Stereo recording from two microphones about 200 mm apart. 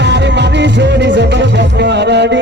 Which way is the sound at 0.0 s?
60° right (ahead or behind).